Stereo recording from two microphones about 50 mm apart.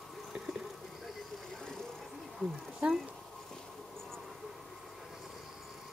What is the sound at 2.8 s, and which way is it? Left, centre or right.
Speech, right.